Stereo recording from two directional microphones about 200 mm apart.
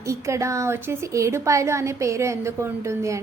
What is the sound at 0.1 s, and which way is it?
A woman's voice, 15° right (ahead or behind).